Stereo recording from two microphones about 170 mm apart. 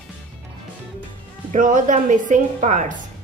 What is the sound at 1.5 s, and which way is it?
A woman's voice, 50° right (ahead or behind).